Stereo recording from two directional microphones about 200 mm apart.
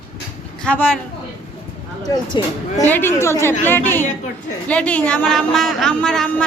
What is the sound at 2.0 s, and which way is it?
Speech, 20° left (ahead or behind).